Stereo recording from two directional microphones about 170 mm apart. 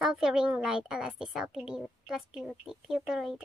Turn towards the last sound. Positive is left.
turn(degrees=0)  # may be behind; listen again after turning